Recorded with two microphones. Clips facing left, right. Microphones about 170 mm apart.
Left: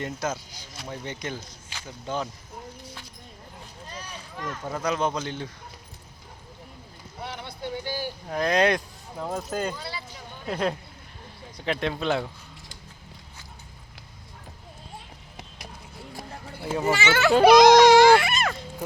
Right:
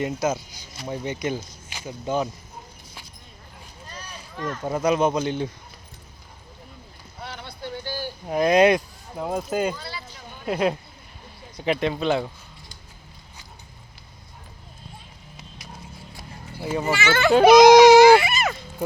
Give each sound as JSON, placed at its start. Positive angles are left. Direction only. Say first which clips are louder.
{"t": 0.0, "sound": "speech", "louder": "right 6 dB", "side_deg": -10}
{"t": 3.9, "sound": "a sound", "louder": "right 2 dB", "side_deg": 15}
{"t": 4.6, "sound": "speech", "louder": "right 6 dB", "side_deg": -15}
{"t": 7.2, "sound": "vehicle", "louder": "left 1 dB", "side_deg": 20}
{"t": 8.3, "sound": "speech", "louder": "right 6 dB", "side_deg": -10}
{"t": 9.7, "sound": "speech", "louder": "even", "side_deg": 20}
{"t": 10.4, "sound": "speech", "louder": "right 4 dB", "side_deg": -10}
{"t": 14.9, "sound": "clip-clop", "louder": "left 2 dB", "side_deg": 55}
{"t": 16.6, "sound": "speech", "louder": "right 1 dB", "side_deg": 0}
{"t": 17.2, "sound": "a sound", "louder": "right 3 dB", "side_deg": 0}